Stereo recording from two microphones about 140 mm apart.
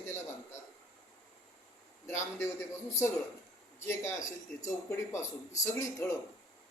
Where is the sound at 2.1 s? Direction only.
20° left (ahead or behind).